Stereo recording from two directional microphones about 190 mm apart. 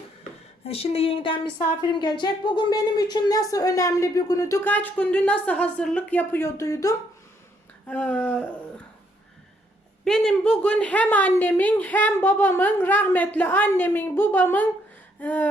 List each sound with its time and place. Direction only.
0.6 s speech: 30° left (ahead or behind); by 8.4 s 5° left (ahead or behind)
10.0 s speech: 5° left (ahead or behind)